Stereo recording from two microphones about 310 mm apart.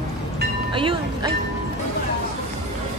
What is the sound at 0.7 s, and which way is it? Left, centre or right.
Speech, centre.